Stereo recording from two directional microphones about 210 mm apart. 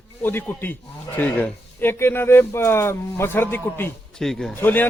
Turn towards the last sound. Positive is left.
turn(degrees=10)  # may be behind; listen again after turning